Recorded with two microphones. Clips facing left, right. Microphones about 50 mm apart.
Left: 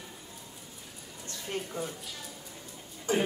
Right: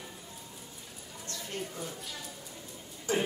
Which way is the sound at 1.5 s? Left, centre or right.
Left.